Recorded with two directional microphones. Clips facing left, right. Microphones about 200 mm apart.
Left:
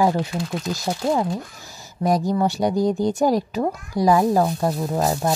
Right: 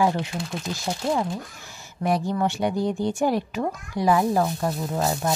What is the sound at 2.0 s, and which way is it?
Speech, 40° left (ahead or behind).